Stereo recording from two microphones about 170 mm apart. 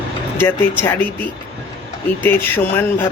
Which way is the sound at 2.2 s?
10° left (ahead or behind).